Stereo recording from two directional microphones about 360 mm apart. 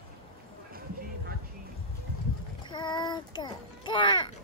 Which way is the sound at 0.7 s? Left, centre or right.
Right.